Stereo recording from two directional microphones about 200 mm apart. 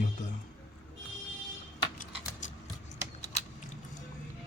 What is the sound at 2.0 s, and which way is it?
Typing, 40° left (ahead or behind).